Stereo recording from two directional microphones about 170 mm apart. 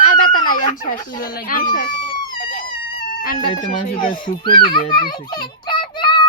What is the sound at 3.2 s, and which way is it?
Speech, 55° left (ahead or behind).